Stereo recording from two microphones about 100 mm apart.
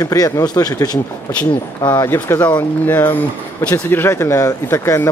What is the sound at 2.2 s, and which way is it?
Speech, 20° left (ahead or behind).